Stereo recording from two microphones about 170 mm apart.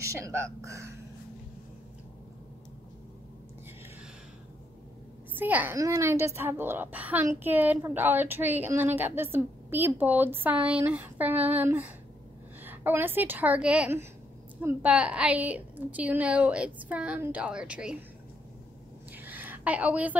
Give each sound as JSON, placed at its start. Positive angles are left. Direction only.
{"t": 0.0, "sound": "a woman's voice", "side_deg": -15}
{"t": 5.3, "sound": "a woman's voice", "side_deg": -10}
{"t": 19.1, "sound": "a sound", "side_deg": -10}